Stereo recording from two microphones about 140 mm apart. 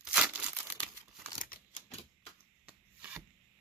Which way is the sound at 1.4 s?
70° left (ahead or behind).